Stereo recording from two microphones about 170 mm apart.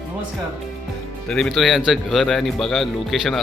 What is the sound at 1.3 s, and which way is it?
A man's voice, centre (ahead or behind).